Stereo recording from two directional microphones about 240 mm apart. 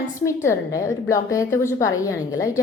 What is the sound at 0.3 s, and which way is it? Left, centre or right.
A woman's voice, centre.